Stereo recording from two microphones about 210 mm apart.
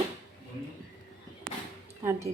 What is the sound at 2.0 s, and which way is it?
Speech, 10° right (ahead or behind).